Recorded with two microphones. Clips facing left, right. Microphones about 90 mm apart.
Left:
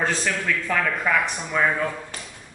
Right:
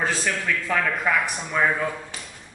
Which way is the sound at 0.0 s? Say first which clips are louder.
Left 1 dB; 5° right (ahead or behind).